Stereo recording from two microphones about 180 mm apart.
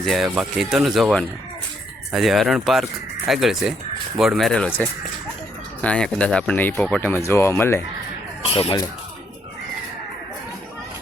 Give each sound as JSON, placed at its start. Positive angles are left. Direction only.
{"t": 0.0, "sound": "speech", "side_deg": 0}
{"t": 5.8, "sound": "speech", "side_deg": 5}
{"t": 8.4, "sound": "speech", "side_deg": 30}